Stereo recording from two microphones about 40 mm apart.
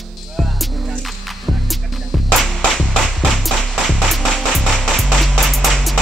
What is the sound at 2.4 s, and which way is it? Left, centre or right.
Music, centre.